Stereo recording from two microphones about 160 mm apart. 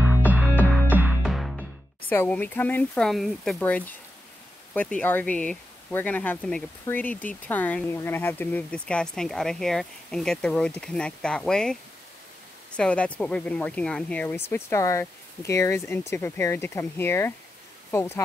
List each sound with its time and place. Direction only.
0.3 s music: 10° right (ahead or behind)
1.2 s music: centre (ahead or behind)
2.0 s speech: 10° left (ahead or behind)